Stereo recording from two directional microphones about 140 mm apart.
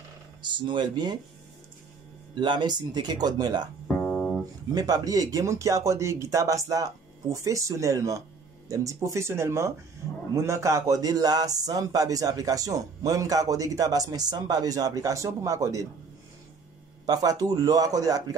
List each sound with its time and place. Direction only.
0.4 s speech: 35° right (ahead or behind)
2.3 s speech: 30° right (ahead or behind)
3.8 s music: centre (ahead or behind)
4.7 s a man's voice: 25° right (ahead or behind)
17.0 s a man's voice: 25° right (ahead or behind)